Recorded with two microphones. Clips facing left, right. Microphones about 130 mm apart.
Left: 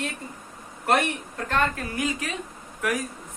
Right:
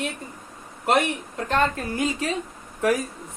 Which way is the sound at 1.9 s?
30° right (ahead or behind).